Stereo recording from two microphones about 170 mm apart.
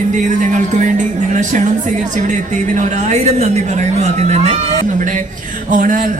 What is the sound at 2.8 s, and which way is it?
Speech, 45° right (ahead or behind).